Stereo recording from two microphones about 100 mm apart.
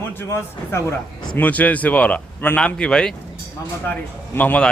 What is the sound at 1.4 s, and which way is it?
A man's voice, 15° left (ahead or behind).